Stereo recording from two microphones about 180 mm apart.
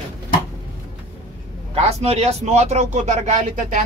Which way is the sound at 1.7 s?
35° right (ahead or behind).